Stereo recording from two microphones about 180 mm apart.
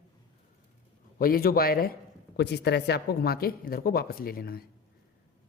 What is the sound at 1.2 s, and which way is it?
Speech, 55° left (ahead or behind).